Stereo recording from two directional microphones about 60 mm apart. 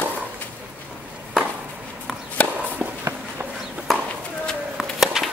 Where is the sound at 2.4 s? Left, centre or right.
Left.